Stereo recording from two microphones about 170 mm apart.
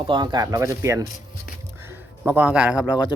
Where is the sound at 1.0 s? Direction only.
50° left (ahead or behind).